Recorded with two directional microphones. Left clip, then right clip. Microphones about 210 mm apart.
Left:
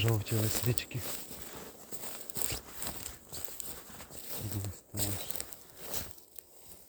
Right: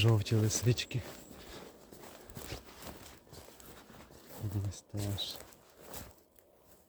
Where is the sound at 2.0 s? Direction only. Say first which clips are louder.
Left 8 dB; 55° left (ahead or behind).